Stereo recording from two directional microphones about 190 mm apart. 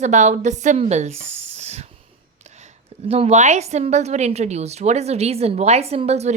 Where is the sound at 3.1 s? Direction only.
35° right (ahead or behind).